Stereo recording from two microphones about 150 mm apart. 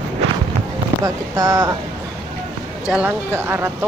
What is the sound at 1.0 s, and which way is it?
Speech, 25° right (ahead or behind).